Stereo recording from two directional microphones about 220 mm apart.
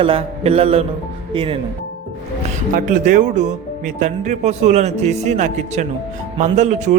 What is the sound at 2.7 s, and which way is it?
A man's voice, 35° right (ahead or behind).